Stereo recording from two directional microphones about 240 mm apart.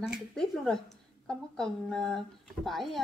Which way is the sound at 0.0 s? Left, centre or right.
Centre.